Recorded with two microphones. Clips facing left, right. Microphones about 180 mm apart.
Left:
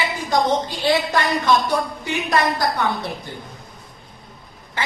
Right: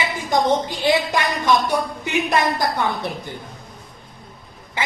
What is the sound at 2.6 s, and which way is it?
Speech, 15° right (ahead or behind).